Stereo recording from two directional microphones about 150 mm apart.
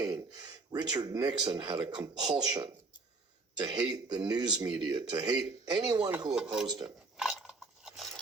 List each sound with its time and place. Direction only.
0.0 s speech: 25° right (ahead or behind)
6.3 s speech: 5° right (ahead or behind)
6.8 s cutlery: 5° right (ahead or behind)